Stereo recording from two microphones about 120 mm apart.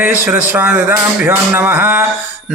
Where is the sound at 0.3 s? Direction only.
15° right (ahead or behind).